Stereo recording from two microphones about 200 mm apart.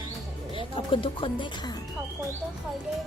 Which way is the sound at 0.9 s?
25° left (ahead or behind).